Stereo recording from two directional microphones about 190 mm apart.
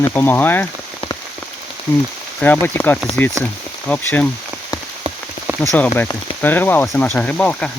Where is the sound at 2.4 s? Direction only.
10° left (ahead or behind).